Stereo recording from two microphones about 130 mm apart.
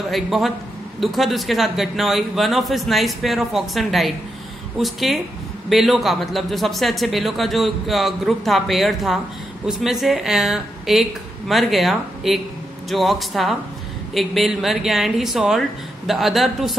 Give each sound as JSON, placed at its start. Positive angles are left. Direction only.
{"t": 0.1, "sound": "a man's voice", "side_deg": 0}